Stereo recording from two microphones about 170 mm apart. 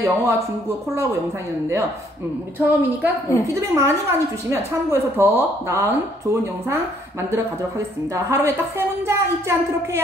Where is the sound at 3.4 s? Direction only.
20° right (ahead or behind).